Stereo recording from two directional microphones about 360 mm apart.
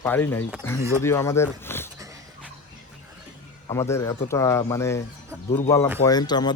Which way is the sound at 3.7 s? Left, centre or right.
Centre.